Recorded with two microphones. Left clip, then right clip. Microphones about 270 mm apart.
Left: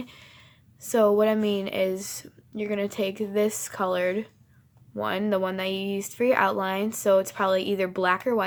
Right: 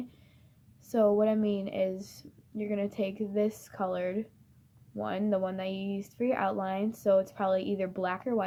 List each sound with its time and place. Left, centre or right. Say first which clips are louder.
0.0 s speech: left 4 dB; left